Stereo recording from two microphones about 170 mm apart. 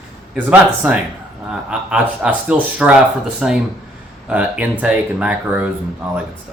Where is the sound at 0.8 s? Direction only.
10° right (ahead or behind).